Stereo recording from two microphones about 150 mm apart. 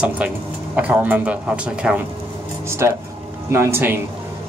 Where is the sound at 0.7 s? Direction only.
10° right (ahead or behind).